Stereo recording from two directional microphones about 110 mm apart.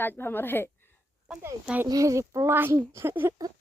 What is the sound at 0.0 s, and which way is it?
Speech, 20° left (ahead or behind).